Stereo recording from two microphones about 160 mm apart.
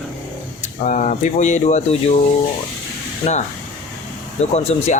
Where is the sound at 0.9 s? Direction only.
50° left (ahead or behind).